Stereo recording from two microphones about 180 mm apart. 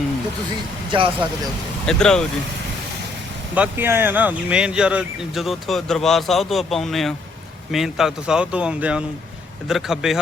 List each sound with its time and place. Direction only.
0.9 s speech: 30° right (ahead or behind)
1.9 s speech: 5° left (ahead or behind)
3.5 s speech: 10° right (ahead or behind)